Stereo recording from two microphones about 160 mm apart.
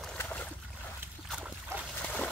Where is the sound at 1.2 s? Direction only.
5° right (ahead or behind).